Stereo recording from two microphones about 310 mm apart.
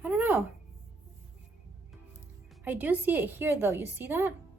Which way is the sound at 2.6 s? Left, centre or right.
Centre.